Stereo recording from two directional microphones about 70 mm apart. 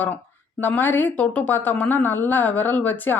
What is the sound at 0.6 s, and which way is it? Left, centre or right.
Speech, left.